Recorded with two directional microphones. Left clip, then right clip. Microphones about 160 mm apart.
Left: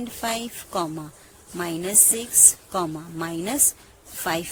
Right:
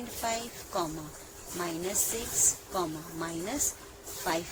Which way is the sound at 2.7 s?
75° left (ahead or behind).